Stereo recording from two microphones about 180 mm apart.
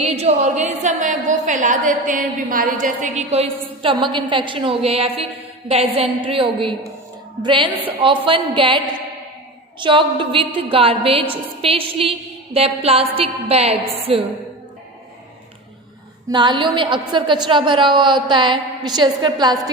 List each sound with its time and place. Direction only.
0.1 s a woman's voice: 35° right (ahead or behind)
9.8 s a woman's voice: 25° right (ahead or behind)
16.3 s a woman's voice: 25° right (ahead or behind)